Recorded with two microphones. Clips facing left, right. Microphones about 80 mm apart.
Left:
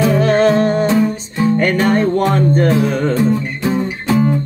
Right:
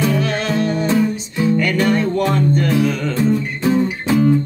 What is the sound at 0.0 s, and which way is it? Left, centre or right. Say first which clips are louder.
Music: left 7 dB; left.